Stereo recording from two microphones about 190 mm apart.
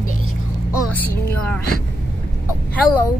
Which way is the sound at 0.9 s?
10° left (ahead or behind).